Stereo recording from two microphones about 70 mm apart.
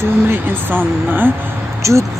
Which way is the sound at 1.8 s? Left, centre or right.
Right.